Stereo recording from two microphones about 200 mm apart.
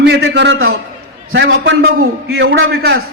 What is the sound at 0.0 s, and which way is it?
A man's voice, 55° right (ahead or behind).